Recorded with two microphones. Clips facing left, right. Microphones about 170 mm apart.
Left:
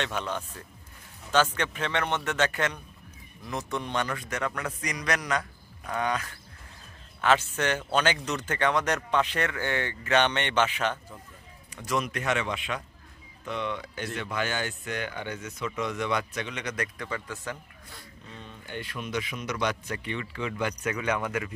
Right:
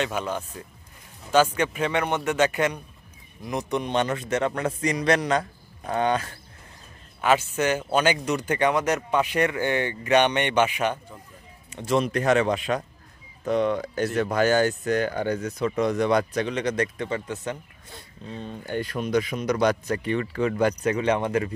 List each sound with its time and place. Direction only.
0.0 s a man's voice: 10° right (ahead or behind); by 6.3 s 30° right (ahead or behind)
7.2 s speech: 10° right (ahead or behind)
11.7 s speech: 30° right (ahead or behind)
18.3 s speech: 35° right (ahead or behind)